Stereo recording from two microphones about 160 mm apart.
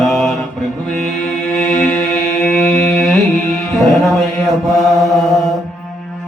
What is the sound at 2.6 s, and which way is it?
Music, centre (ahead or behind).